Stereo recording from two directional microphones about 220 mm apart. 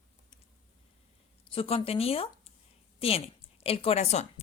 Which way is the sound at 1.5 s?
25° left (ahead or behind).